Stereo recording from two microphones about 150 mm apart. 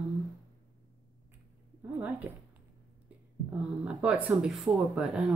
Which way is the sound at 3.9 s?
5° right (ahead or behind).